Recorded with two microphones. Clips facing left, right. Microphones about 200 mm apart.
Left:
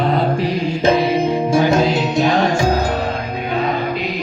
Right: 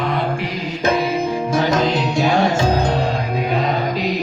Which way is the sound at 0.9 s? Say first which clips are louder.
Left 3 dB; 30° left (ahead or behind).